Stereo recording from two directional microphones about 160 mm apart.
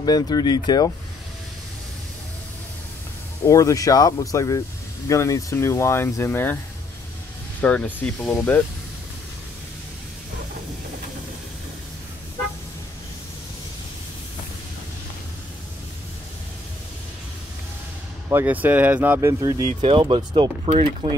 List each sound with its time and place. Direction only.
0.0 s speech: 25° left (ahead or behind)
3.4 s speech: 20° left (ahead or behind)
7.6 s speech: 10° left (ahead or behind)
18.3 s speech: 10° right (ahead or behind); by 21.2 s 30° right (ahead or behind)